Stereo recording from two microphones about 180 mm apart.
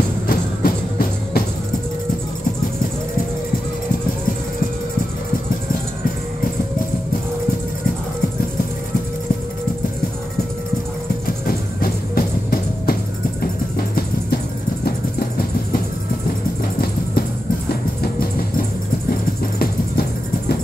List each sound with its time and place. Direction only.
0.3 s music: 55° left (ahead or behind)
11.4 s music: 55° left (ahead or behind)
18.0 s vehicle: 55° left (ahead or behind)
19.6 s music: 55° left (ahead or behind)